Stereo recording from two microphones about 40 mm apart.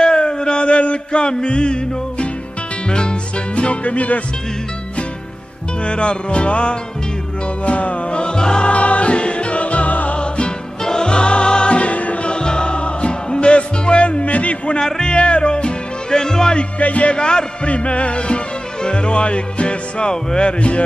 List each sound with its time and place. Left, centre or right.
0.0 s music: left
5.9 s music: left
10.8 s music: centre; by 14.8 s left
14.8 s music: centre
16.5 s music: left